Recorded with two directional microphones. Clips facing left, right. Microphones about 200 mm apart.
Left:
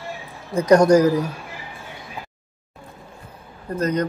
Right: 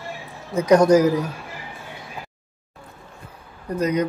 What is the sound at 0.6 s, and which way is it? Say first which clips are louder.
Speech: left 1 dB; 5° right (ahead or behind).